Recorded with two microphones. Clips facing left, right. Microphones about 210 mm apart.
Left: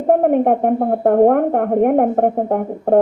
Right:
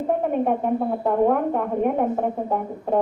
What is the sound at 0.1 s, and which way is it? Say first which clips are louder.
Speech: left 9 dB; 60° left (ahead or behind).